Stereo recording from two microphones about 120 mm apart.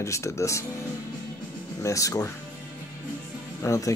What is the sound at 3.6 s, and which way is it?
Speech, 25° left (ahead or behind).